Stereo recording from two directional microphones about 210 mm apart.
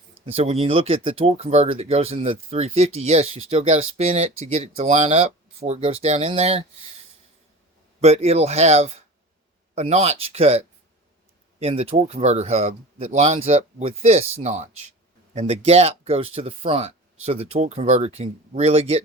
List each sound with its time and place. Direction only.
0.3 s speech: 30° right (ahead or behind)
8.0 s speech: 30° right (ahead or behind)